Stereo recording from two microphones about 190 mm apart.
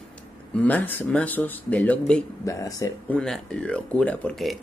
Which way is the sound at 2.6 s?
20° left (ahead or behind).